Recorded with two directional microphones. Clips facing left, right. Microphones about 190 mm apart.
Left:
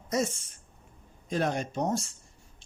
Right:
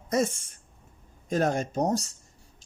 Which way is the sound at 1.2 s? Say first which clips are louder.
Right 3 dB; 45° right (ahead or behind).